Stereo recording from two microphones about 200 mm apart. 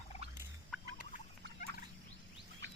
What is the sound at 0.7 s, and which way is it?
Fowl, centre (ahead or behind).